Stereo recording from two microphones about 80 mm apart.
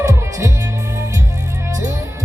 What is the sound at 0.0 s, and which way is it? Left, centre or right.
Music, right.